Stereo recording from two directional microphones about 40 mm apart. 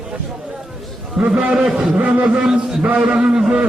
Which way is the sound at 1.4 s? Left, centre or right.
Right.